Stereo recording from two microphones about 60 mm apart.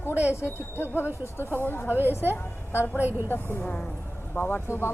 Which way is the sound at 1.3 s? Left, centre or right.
Left.